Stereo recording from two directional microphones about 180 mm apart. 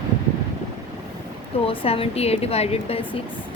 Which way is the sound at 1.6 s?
30° left (ahead or behind).